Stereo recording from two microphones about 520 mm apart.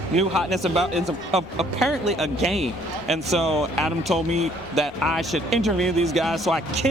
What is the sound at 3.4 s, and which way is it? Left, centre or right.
Speech, centre.